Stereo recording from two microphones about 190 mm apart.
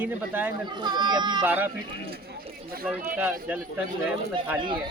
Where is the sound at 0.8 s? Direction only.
20° right (ahead or behind).